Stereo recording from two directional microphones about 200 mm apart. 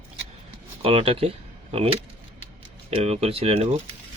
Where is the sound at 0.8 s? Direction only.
30° right (ahead or behind).